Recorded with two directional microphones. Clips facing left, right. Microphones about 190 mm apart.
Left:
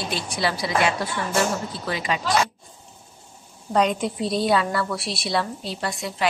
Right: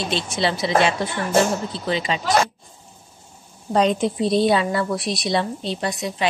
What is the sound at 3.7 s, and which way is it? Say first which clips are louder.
A woman's voice: right 3 dB; 25° right (ahead or behind).